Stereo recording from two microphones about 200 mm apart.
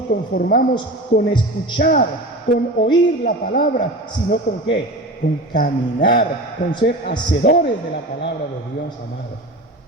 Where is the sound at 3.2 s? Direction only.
45° left (ahead or behind).